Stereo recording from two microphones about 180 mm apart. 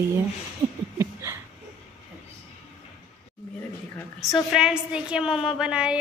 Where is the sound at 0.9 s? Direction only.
15° right (ahead or behind).